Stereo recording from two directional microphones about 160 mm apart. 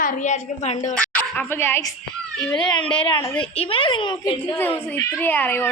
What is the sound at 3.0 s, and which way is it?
A woman's voice, 35° left (ahead or behind).